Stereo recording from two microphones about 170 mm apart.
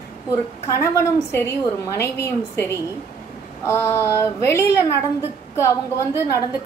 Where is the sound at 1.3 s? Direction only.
15° left (ahead or behind).